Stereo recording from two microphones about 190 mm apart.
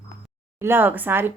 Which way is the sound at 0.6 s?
10° right (ahead or behind).